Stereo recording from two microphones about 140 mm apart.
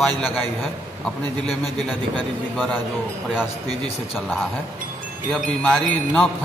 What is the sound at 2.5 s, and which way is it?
Speech, 10° left (ahead or behind).